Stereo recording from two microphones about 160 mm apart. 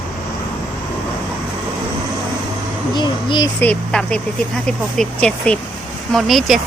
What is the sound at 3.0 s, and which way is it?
Speech, 25° left (ahead or behind).